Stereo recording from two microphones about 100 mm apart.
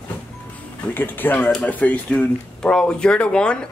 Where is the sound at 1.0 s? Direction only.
20° left (ahead or behind).